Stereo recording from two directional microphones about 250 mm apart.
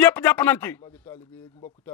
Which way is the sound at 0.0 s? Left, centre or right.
Centre.